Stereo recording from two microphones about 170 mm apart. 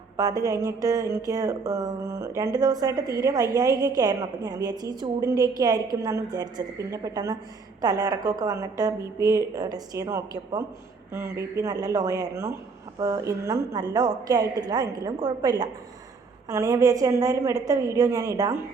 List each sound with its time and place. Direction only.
0.2 s speech: 20° right (ahead or behind)